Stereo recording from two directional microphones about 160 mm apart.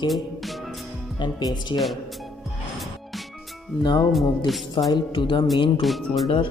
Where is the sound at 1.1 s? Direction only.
30° left (ahead or behind).